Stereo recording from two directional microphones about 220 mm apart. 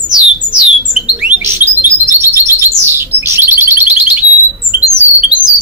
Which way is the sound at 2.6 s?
10° right (ahead or behind).